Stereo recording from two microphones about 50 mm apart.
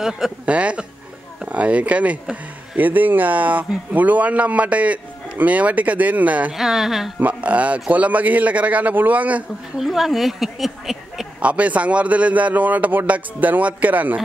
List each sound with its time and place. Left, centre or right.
0.5 s a man's voice: right
6.5 s speech: centre
7.2 s a man's voice: right
9.8 s a woman's voice: centre
11.3 s a man's voice: right